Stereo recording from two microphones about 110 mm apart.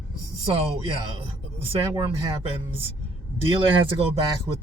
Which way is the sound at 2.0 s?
60° right (ahead or behind).